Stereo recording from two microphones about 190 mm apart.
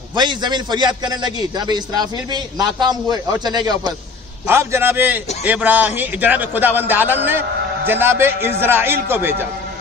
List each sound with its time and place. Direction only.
0.1 s a man's voice: 25° right (ahead or behind)